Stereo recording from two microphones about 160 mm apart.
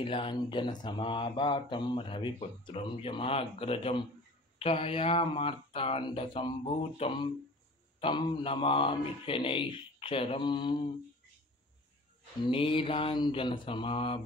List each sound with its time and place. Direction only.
0.0 s speech: 35° left (ahead or behind)
12.4 s speech: 35° left (ahead or behind)